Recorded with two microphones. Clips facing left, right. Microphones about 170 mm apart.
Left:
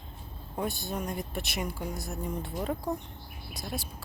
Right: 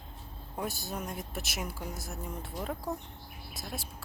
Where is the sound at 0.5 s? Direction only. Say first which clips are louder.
Left 4 dB; 5° right (ahead or behind).